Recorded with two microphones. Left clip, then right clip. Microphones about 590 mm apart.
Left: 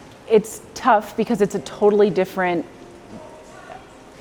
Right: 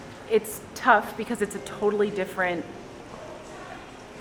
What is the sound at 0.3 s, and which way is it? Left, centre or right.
Speech, left.